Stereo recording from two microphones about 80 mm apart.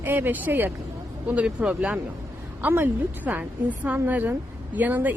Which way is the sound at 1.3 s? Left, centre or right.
Centre.